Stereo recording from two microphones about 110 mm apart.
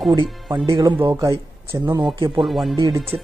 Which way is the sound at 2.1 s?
50° right (ahead or behind).